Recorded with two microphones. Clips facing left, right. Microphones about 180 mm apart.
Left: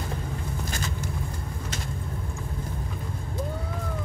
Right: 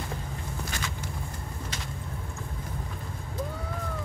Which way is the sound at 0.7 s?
40° left (ahead or behind).